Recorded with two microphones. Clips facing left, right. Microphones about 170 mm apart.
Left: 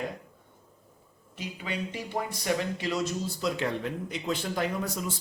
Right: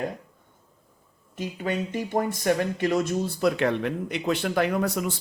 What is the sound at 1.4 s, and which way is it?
Speech, 50° right (ahead or behind).